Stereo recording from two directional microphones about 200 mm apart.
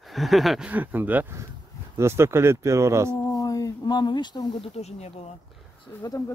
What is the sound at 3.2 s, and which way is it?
Speech, 20° left (ahead or behind).